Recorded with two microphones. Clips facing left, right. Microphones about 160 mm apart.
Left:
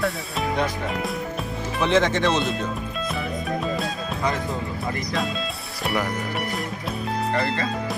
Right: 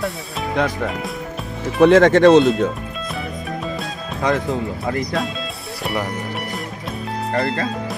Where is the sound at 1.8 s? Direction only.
55° right (ahead or behind).